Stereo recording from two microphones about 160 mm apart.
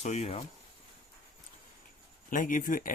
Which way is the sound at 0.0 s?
40° left (ahead or behind).